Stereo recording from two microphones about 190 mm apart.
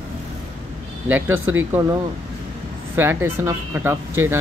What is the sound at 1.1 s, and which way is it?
Speech, 10° right (ahead or behind).